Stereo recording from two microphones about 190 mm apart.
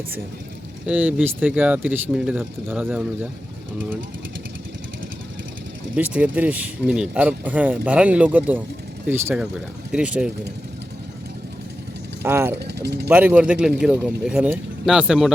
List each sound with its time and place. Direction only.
0.9 s speech: 5° right (ahead or behind)
6.0 s speech: 10° right (ahead or behind)
12.2 s speech: 10° right (ahead or behind)
12.5 s speech: 60° right (ahead or behind)
13.1 s speech: 10° right (ahead or behind)